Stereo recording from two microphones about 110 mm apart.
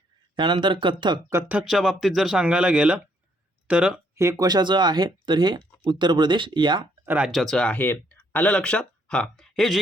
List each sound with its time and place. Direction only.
0.3 s speech: 45° right (ahead or behind)
1.3 s speech: 20° right (ahead or behind)
1.6 s speech: 5° right (ahead or behind)
4.2 s speech: 30° right (ahead or behind)
7.0 s speech: 15° right (ahead or behind)
7.3 s speech: centre (ahead or behind)